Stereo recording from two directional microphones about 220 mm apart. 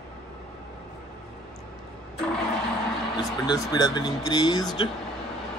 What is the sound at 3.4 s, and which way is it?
Speech, 20° left (ahead or behind).